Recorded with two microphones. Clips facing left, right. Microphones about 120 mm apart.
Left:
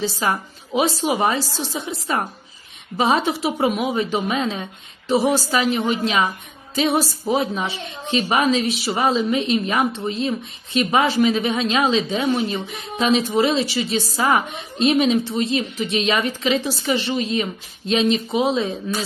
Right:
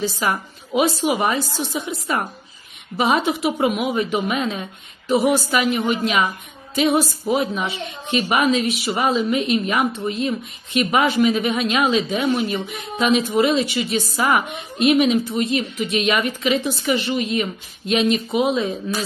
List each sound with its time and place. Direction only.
0.0 s speech: 30° left (ahead or behind)